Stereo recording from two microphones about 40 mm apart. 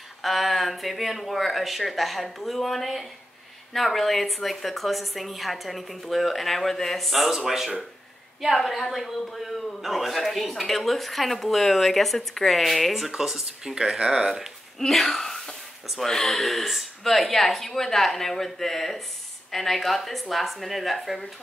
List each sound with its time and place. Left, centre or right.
0.2 s a woman's voice: centre
7.2 s a woman's voice: centre
13.8 s speech: centre
14.8 s a woman's voice: centre